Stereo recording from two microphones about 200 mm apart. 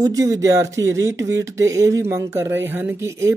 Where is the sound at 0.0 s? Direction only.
15° right (ahead or behind).